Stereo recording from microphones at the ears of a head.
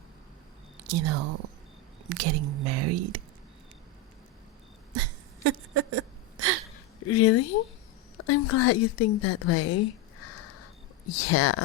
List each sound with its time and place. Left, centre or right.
0.9 s speech: right
4.9 s a sound: right
7.0 s a woman's voice: left